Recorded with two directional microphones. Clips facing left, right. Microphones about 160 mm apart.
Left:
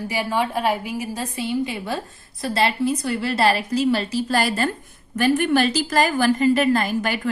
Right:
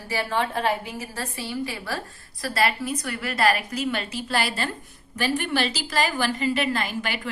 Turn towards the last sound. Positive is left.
turn(degrees=45)  # may be behind; listen again after turning